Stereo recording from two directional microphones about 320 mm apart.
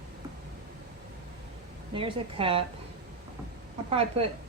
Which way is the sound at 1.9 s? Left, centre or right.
Centre.